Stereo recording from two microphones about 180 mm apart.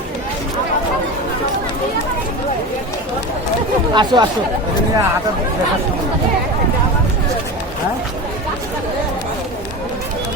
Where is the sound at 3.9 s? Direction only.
25° right (ahead or behind).